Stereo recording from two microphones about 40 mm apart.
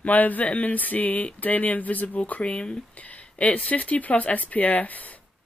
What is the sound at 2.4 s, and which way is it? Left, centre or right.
Speech, left.